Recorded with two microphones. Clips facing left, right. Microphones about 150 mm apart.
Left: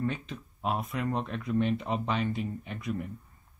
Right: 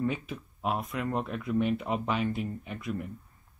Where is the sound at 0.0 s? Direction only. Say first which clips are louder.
Right 2 dB; 5° right (ahead or behind).